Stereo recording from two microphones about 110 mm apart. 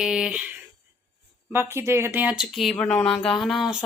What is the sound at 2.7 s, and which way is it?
Speech, 10° left (ahead or behind).